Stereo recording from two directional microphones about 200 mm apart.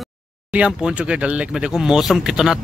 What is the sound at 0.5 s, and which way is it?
Speech, 5° right (ahead or behind).